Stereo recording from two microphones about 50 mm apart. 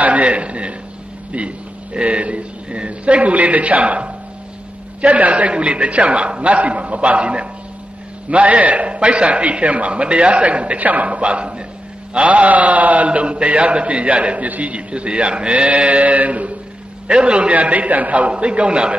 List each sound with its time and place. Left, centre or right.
0.0 s a man's voice: right
2.0 s a man's voice: right